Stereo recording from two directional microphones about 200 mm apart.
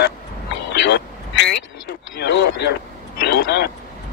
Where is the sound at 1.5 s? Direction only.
55° left (ahead or behind).